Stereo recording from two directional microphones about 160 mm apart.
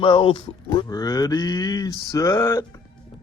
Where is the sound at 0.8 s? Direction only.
25° left (ahead or behind).